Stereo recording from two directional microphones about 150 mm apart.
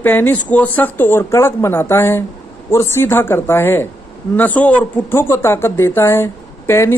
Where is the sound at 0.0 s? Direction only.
15° left (ahead or behind).